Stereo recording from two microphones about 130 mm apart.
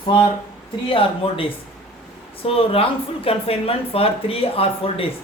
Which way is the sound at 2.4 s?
45° left (ahead or behind).